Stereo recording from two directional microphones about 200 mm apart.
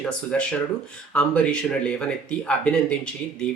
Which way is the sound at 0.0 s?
5° left (ahead or behind).